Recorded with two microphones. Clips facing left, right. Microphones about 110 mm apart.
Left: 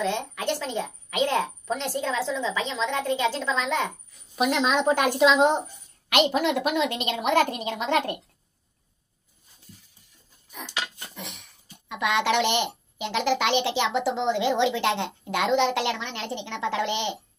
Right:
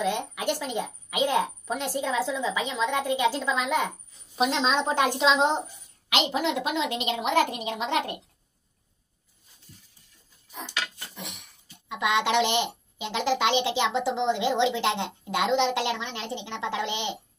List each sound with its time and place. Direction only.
0.0 s a woman's voice: 10° right (ahead or behind)
4.4 s a woman's voice: 20° right (ahead or behind)
11.1 s a sound: 15° right (ahead or behind)
11.9 s a woman's voice: 20° right (ahead or behind)